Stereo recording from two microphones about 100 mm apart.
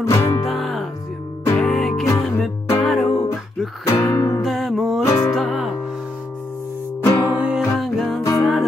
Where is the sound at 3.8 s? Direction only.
30° left (ahead or behind).